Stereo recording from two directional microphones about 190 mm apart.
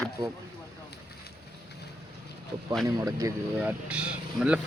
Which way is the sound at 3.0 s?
20° right (ahead or behind).